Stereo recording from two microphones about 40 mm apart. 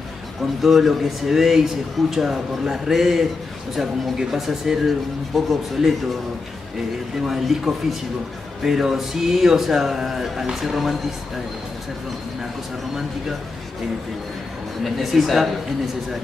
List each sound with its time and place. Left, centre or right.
0.6 s speech: centre
7.2 s speech: centre
15.0 s speech: centre